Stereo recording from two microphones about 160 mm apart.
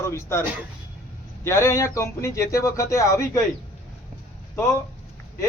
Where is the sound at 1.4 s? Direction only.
15° left (ahead or behind).